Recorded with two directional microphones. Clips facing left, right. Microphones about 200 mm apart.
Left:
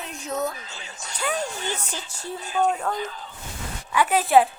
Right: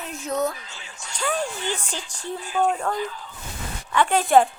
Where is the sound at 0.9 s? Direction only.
40° left (ahead or behind).